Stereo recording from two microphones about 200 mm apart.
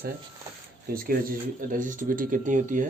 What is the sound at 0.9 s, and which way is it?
Speech, 45° right (ahead or behind).